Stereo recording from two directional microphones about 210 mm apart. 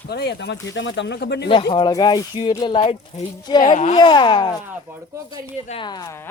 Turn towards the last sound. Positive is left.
turn(degrees=15)  # may be behind; listen again after turning